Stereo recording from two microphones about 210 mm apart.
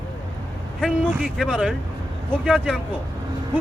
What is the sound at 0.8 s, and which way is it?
Speech, centre (ahead or behind).